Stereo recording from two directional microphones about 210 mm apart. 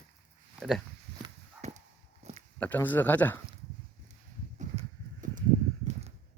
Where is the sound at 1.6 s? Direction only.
30° right (ahead or behind).